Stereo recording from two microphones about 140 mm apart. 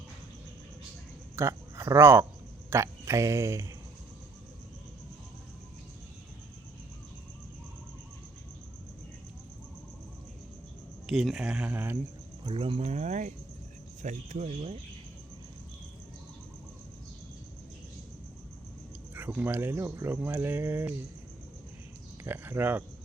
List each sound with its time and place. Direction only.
1.4 s speech: 20° right (ahead or behind)
11.0 s speech: centre (ahead or behind)
12.5 s speech: 40° right (ahead or behind)
19.1 s speech: 10° right (ahead or behind)
22.2 s speech: 15° right (ahead or behind)